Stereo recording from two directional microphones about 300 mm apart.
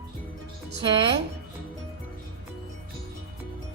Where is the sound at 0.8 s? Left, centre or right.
Centre.